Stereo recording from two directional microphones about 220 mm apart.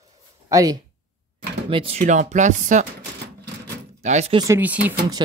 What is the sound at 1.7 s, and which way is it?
Speech, 25° right (ahead or behind).